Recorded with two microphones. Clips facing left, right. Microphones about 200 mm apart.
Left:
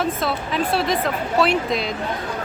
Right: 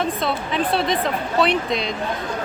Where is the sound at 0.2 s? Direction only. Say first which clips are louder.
Even; centre (ahead or behind).